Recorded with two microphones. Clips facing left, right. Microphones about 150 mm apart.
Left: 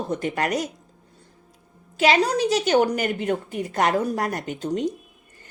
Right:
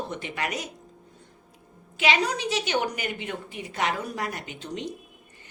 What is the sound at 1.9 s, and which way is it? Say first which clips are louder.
A woman's voice: left 6 dB; 40° left (ahead or behind).